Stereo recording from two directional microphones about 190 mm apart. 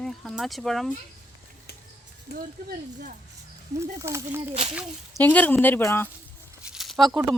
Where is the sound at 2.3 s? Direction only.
55° left (ahead or behind).